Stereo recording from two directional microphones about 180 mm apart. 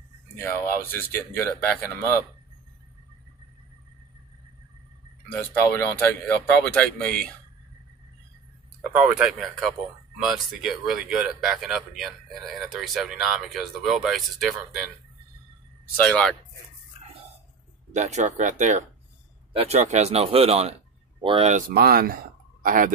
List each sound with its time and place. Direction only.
0.4 s speech: 10° left (ahead or behind)
5.3 s speech: 10° left (ahead or behind)
8.9 s speech: 5° right (ahead or behind)
16.0 s speech: 5° left (ahead or behind)
17.9 s speech: 40° right (ahead or behind)
21.5 s speech: 55° right (ahead or behind)